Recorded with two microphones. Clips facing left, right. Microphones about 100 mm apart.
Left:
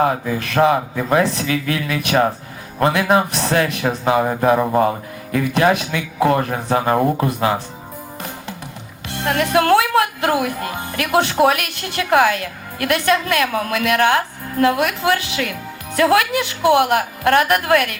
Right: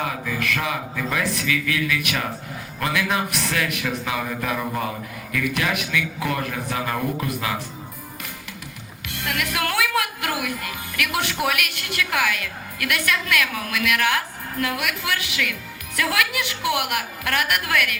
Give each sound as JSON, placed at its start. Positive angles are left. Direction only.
{"t": 0.0, "sound": "a woman's voice", "side_deg": 35}
{"t": 9.0, "sound": "a woman's voice", "side_deg": 30}